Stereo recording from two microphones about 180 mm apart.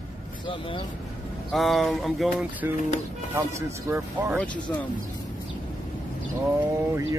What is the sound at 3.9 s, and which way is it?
Speech, 15° right (ahead or behind).